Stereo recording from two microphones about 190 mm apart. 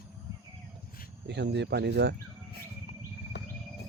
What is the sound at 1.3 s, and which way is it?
Speech, 65° right (ahead or behind).